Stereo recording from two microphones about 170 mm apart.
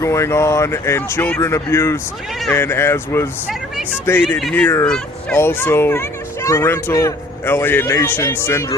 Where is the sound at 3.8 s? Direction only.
10° right (ahead or behind).